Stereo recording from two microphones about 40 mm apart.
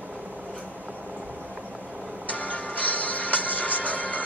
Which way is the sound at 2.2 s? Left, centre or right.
Left.